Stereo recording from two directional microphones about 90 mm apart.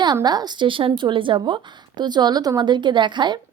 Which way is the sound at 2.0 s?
50° right (ahead or behind).